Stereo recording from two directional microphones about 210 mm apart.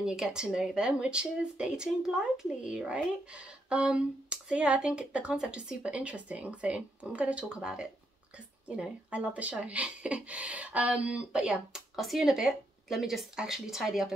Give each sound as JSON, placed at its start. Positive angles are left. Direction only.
{"t": 0.0, "sound": "speech", "side_deg": -5}